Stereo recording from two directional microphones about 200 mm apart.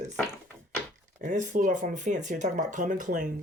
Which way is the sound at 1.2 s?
40° right (ahead or behind).